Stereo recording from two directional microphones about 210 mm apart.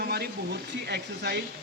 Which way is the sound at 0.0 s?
50° right (ahead or behind).